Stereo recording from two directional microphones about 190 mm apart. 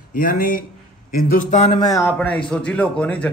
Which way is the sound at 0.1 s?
50° left (ahead or behind).